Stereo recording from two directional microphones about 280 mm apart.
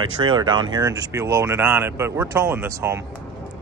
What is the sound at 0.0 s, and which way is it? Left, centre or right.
Speech, centre.